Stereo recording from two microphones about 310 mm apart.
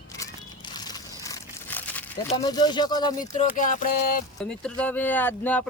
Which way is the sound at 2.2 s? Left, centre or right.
Centre.